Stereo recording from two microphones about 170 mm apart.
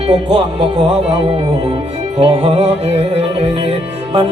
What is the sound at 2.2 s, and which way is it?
Music, 35° right (ahead or behind).